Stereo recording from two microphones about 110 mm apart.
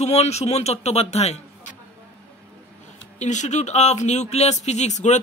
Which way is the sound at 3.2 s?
90° left.